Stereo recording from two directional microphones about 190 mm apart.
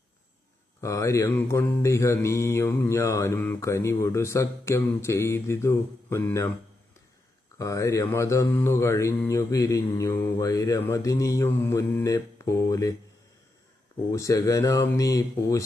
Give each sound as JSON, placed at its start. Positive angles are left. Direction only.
{"t": 0.8, "sound": "mantra", "side_deg": 15}
{"t": 7.6, "sound": "mantra", "side_deg": 15}
{"t": 14.1, "sound": "mantra", "side_deg": 15}